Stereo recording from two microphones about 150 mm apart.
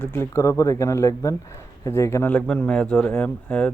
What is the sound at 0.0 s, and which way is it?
Speech, 15° left (ahead or behind).